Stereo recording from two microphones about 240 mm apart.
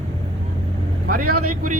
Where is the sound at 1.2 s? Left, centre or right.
Right.